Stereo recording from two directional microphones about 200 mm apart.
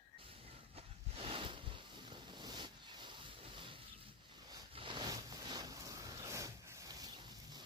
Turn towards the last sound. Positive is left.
turn(degrees=-20)  # may be behind; listen again after turning